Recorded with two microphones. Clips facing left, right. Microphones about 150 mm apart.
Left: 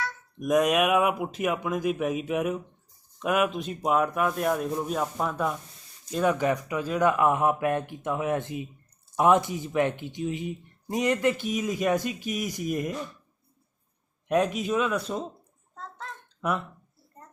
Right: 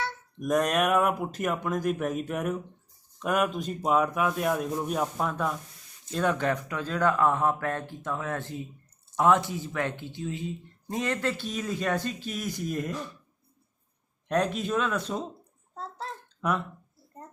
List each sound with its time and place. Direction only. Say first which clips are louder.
0.3 s speech: left 3 dB; 5° left (ahead or behind)
14.3 s speech: left 2 dB; 5° left (ahead or behind)
15.7 s bathtub: right 3 dB; 35° right (ahead or behind)